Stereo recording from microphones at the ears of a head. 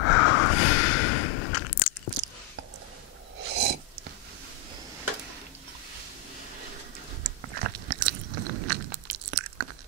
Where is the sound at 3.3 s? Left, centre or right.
Right.